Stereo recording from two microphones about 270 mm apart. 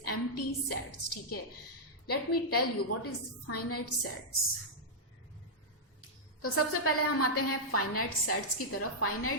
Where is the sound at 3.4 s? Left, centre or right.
Left.